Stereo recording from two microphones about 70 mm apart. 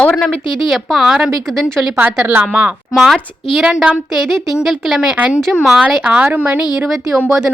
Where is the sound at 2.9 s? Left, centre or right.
Centre.